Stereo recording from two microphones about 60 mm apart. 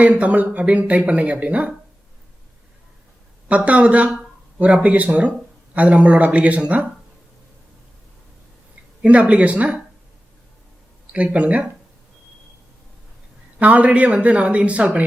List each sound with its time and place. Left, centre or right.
0.0 s speech: right
3.5 s speech: right
9.0 s speech: centre
11.1 s speech: right
13.6 s speech: right